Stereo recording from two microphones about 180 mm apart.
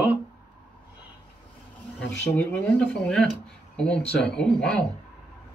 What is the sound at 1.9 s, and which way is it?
Speech, 10° left (ahead or behind).